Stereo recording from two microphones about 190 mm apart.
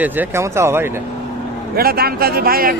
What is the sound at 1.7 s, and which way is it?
A man's voice, 55° right (ahead or behind).